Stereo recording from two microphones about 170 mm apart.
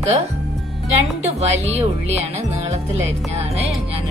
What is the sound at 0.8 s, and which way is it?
Speech, 40° right (ahead or behind).